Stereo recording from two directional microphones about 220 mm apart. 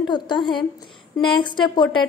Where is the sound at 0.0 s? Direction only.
20° left (ahead or behind).